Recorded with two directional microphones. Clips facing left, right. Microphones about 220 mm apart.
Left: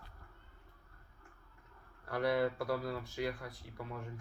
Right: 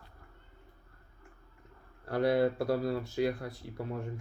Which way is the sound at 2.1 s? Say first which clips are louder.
Right 5 dB; 25° right (ahead or behind).